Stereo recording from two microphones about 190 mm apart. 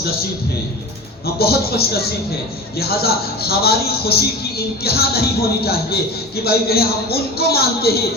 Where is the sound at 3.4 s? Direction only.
55° left (ahead or behind).